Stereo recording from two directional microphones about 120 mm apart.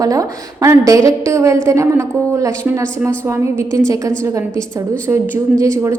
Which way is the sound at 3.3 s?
25° right (ahead or behind).